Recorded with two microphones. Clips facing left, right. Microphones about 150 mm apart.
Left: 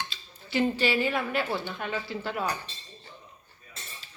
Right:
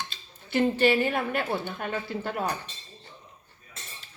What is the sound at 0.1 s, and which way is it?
Speech, 55° right (ahead or behind).